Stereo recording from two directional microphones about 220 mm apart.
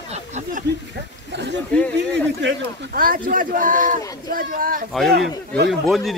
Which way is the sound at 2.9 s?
40° right (ahead or behind).